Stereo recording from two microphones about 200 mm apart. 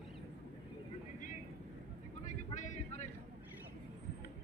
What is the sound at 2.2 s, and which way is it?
Vehicle, 35° left (ahead or behind).